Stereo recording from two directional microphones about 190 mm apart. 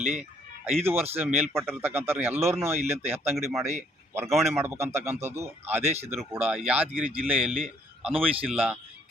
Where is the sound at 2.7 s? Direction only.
35° right (ahead or behind).